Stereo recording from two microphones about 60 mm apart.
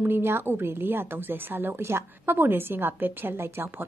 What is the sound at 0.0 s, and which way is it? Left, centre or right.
A woman's voice, right.